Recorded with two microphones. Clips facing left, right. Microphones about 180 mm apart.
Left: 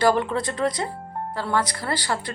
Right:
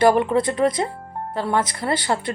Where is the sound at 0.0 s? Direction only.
20° right (ahead or behind).